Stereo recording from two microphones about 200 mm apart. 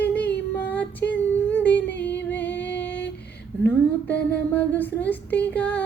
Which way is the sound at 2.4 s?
10° left (ahead or behind).